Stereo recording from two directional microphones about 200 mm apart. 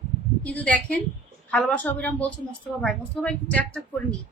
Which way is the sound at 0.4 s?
5° left (ahead or behind).